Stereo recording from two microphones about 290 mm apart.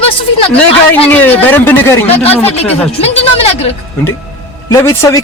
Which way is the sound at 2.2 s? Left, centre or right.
Centre.